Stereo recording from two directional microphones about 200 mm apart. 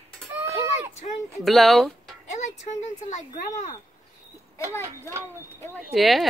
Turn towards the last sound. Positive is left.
turn(degrees=0)  # may be behind; listen again after turning